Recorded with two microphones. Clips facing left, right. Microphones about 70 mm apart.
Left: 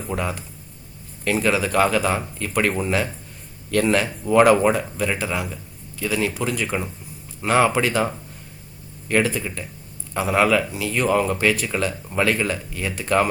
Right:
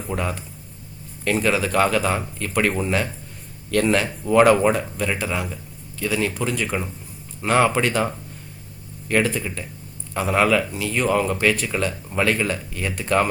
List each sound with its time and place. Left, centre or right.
0.0 s speech: centre